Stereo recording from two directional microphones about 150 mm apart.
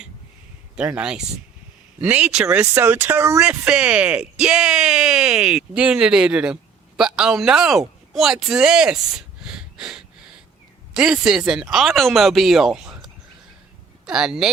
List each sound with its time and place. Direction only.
0.8 s speech: 5° right (ahead or behind)